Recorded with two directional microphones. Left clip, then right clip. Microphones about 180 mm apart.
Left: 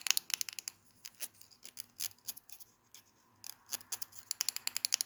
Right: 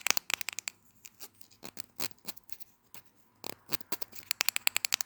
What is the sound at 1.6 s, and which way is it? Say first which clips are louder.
Toothbrush: right 4 dB; 45° right (ahead or behind).